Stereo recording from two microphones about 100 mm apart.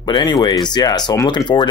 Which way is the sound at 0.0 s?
50° left (ahead or behind).